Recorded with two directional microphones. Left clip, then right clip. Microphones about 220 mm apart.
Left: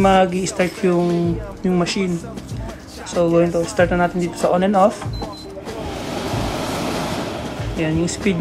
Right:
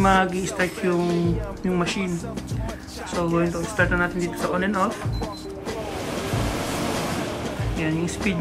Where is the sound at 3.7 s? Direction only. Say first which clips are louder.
Left 3 dB; 10° left (ahead or behind).